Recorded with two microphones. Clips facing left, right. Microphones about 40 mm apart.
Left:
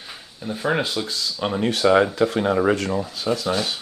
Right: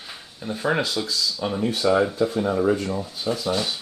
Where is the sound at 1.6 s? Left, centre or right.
Left.